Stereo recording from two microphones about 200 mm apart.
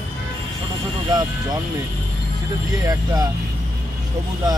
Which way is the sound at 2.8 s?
20° right (ahead or behind).